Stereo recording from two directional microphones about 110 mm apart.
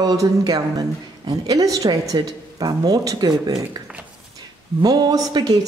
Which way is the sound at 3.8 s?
40° right (ahead or behind).